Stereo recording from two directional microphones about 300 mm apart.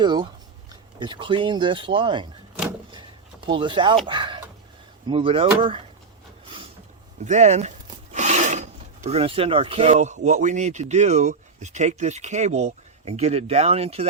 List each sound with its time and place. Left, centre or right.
0.0 s speech: centre
3.4 s speech: centre
7.3 s a sound: right
9.0 s speech: centre